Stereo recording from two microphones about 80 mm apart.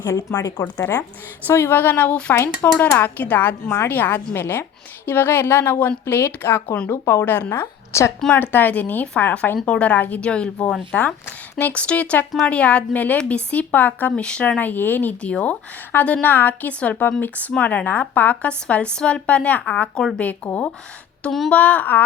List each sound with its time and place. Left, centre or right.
0.0 s speech: left
1.5 s speech: left
2.3 s speech: left
2.7 s speech: left
8.3 s speech: left
11.3 s a sound: left
11.7 s speech: centre
21.2 s speech: centre
21.5 s speech: centre